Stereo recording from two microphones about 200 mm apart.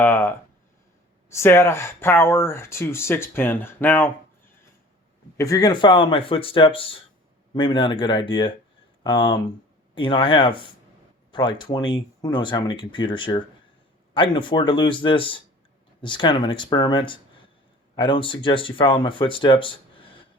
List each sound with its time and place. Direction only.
0.0 s speech: 10° left (ahead or behind)
5.4 s speech: 15° left (ahead or behind)